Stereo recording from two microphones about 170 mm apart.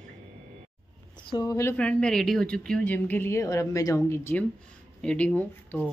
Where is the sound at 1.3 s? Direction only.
20° left (ahead or behind).